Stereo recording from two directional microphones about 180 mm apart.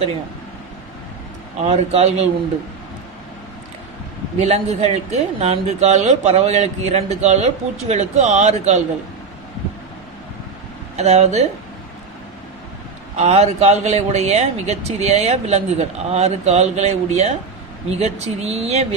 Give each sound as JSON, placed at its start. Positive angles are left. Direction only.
{"t": 1.6, "sound": "speech", "side_deg": -35}
{"t": 4.4, "sound": "speech", "side_deg": -35}
{"t": 11.0, "sound": "speech", "side_deg": -35}
{"t": 13.1, "sound": "speech", "side_deg": -35}